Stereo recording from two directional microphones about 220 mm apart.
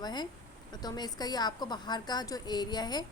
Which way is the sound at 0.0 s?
20° left (ahead or behind).